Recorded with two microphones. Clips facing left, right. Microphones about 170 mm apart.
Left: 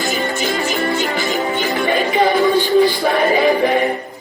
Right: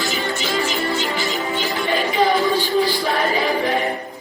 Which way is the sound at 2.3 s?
20° left (ahead or behind).